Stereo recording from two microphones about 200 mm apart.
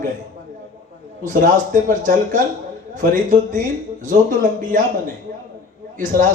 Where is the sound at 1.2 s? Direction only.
40° right (ahead or behind).